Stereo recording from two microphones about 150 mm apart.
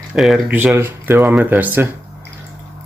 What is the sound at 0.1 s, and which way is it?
Speech, centre (ahead or behind).